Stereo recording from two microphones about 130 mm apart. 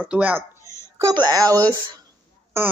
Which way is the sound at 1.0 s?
30° right (ahead or behind).